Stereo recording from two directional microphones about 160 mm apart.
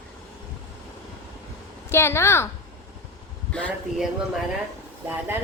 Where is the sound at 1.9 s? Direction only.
15° left (ahead or behind).